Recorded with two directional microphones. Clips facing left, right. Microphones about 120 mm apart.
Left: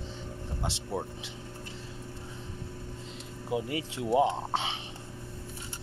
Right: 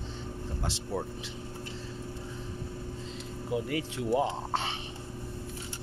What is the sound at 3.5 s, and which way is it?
Speech, 20° left (ahead or behind).